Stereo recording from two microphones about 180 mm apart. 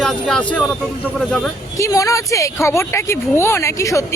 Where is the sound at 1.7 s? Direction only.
15° left (ahead or behind).